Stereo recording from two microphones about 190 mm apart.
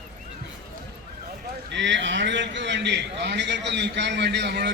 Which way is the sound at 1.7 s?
70° right (ahead or behind).